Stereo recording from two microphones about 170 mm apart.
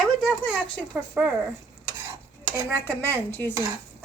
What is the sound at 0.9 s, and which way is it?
Speech, 5° right (ahead or behind).